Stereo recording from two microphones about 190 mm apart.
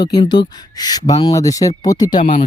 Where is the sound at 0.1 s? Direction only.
20° left (ahead or behind).